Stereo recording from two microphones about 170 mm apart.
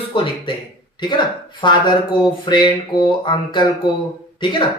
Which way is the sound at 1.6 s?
30° left (ahead or behind).